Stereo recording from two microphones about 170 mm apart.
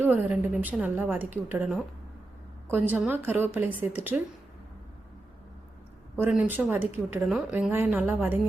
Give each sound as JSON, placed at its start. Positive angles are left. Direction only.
{"t": 0.0, "sound": "a woman's voice", "side_deg": -10}
{"t": 2.9, "sound": "a woman's voice", "side_deg": -10}
{"t": 6.1, "sound": "a woman's voice", "side_deg": -10}
{"t": 7.3, "sound": "a woman's voice", "side_deg": 0}